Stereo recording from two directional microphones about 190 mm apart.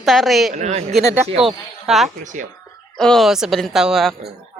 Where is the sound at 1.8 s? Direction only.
Centre (ahead or behind).